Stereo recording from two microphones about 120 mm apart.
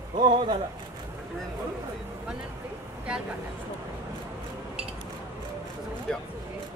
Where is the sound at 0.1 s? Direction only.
90° right.